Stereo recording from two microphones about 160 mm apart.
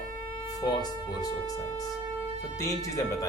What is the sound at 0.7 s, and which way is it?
Speech, 25° left (ahead or behind).